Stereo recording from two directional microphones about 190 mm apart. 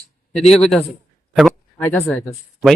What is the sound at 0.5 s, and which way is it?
Speech, 5° left (ahead or behind).